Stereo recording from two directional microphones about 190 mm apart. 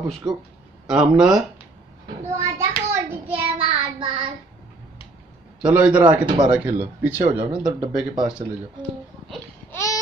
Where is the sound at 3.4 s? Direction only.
30° right (ahead or behind).